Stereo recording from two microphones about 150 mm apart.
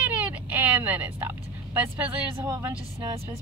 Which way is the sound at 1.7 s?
10° right (ahead or behind).